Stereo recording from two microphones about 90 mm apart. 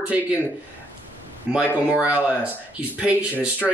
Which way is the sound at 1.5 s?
10° right (ahead or behind).